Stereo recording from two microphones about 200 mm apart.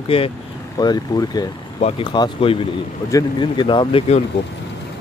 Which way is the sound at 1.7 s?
30° left (ahead or behind).